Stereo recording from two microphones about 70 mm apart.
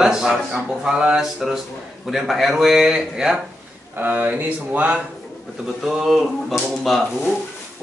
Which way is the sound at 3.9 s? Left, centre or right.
Right.